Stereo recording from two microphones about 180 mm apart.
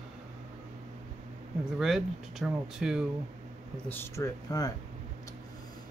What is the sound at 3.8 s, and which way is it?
Speech, 10° left (ahead or behind).